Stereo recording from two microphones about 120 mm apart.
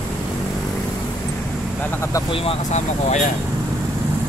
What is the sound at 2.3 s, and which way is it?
Speech, 50° left (ahead or behind).